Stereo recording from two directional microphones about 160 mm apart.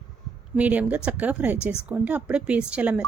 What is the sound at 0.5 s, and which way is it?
Speech, 10° right (ahead or behind).